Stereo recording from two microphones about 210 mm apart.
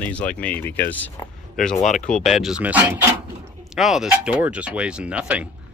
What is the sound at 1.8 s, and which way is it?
Speech, 35° left (ahead or behind).